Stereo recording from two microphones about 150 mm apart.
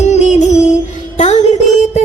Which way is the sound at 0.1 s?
50° left (ahead or behind).